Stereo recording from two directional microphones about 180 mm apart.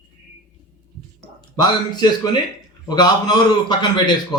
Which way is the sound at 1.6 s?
25° left (ahead or behind).